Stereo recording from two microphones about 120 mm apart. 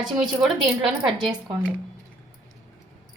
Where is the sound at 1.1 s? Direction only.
40° right (ahead or behind).